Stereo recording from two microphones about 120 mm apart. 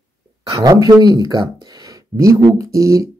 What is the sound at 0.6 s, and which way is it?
Speech, 30° right (ahead or behind).